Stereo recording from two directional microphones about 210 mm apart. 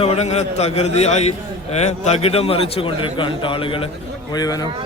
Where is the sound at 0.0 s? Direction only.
30° left (ahead or behind).